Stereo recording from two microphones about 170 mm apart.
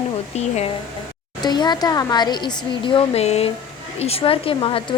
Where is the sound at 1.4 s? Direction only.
25° left (ahead or behind).